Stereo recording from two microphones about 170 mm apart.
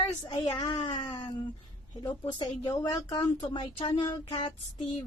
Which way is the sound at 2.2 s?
25° left (ahead or behind).